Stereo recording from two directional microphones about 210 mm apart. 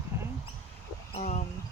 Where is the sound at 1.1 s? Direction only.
35° left (ahead or behind).